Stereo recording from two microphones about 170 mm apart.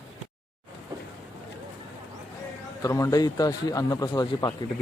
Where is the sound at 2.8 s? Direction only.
20° left (ahead or behind).